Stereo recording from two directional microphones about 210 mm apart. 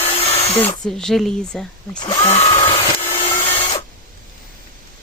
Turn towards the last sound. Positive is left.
turn(degrees=30)  # may be behind; listen again after turning